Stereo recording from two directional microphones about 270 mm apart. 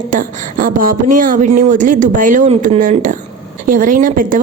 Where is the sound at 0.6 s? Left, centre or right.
Right.